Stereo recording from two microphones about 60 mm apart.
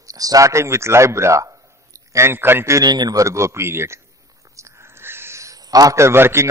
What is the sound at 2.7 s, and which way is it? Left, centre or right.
A man's voice, right.